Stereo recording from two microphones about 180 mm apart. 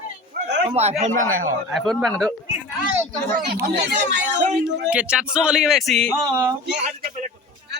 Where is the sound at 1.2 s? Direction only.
50° right (ahead or behind).